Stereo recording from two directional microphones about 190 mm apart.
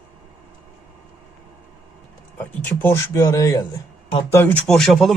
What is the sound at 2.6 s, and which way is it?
Speech, 10° left (ahead or behind).